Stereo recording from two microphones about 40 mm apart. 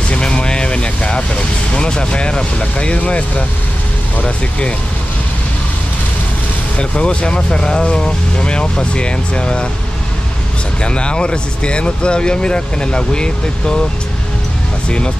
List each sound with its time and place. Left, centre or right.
0.1 s vehicle: left
4.2 s speech: left
6.8 s speech: left
10.8 s speech: left